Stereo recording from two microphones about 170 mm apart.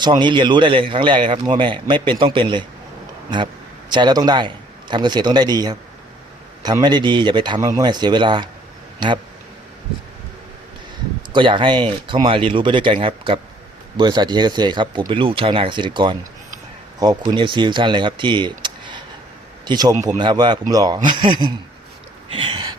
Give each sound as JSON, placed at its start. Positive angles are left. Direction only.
{"t": 0.2, "sound": "a man's voice", "side_deg": -25}
{"t": 11.3, "sound": "a man's voice", "side_deg": -30}
{"t": 22.3, "sound": "a sound", "side_deg": -30}